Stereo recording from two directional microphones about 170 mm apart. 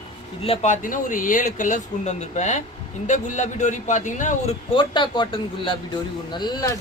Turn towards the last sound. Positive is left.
turn(degrees=20)  # may be behind; listen again after turning